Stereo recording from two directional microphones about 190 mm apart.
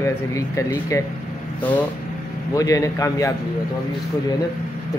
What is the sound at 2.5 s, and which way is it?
Speech, 20° left (ahead or behind).